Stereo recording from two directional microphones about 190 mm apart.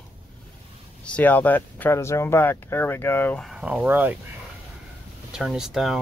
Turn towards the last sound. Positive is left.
turn(degrees=0)  # may be behind; listen again after turning